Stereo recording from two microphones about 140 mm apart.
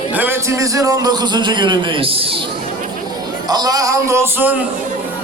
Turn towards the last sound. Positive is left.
turn(degrees=-15)  # may be behind; listen again after turning